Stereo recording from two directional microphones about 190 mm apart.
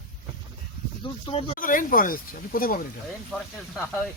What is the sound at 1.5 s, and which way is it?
Speech, 45° left (ahead or behind).